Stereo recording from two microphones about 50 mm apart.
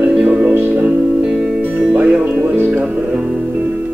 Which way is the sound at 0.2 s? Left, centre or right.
Right.